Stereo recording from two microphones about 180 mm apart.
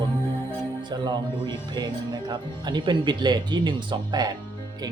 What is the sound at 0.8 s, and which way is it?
Speech, 25° right (ahead or behind).